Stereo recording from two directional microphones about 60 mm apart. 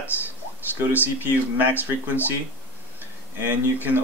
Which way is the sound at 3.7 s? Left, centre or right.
Right.